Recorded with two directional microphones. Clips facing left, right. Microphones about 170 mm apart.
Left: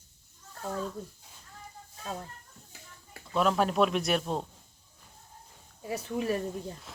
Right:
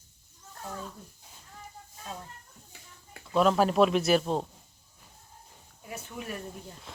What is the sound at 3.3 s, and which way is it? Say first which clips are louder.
Speech: right 3 dB; centre (ahead or behind).